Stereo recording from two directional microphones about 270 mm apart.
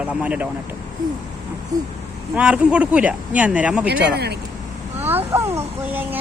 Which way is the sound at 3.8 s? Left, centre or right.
Right.